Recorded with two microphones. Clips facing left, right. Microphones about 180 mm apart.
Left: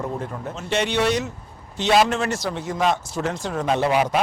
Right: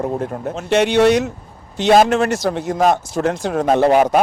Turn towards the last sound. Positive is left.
turn(degrees=-45)  # may be behind; listen again after turning